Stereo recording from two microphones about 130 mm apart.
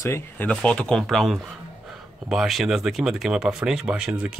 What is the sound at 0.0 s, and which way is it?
Speech, 20° left (ahead or behind).